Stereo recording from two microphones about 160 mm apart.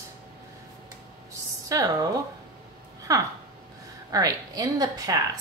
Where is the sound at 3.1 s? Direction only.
20° right (ahead or behind).